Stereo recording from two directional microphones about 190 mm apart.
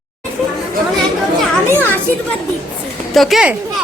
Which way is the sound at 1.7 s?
10° left (ahead or behind).